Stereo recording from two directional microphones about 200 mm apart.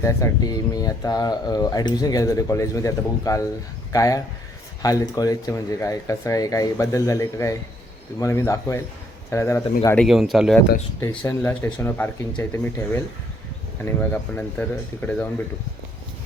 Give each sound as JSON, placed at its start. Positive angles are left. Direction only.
{"t": 0.0, "sound": "speech", "side_deg": 15}
{"t": 10.1, "sound": "speech", "side_deg": 0}
{"t": 11.2, "sound": "speech", "side_deg": 10}